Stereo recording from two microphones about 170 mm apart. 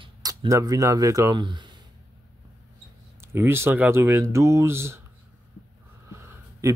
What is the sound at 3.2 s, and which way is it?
Speech, 15° right (ahead or behind).